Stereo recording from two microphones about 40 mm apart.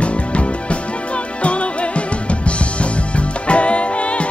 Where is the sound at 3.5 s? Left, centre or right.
Left.